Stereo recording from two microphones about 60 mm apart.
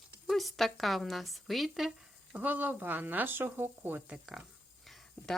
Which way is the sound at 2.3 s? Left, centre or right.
Right.